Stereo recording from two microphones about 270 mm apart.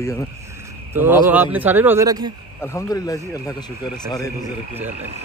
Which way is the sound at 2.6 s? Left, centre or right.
Centre.